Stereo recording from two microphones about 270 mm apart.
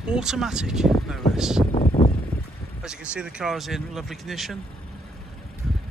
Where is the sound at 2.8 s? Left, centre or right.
Centre.